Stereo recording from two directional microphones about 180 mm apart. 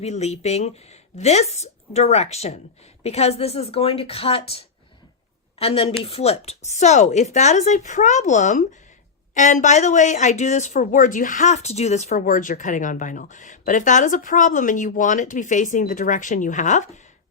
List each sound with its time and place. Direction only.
0.0 s speech: 35° left (ahead or behind)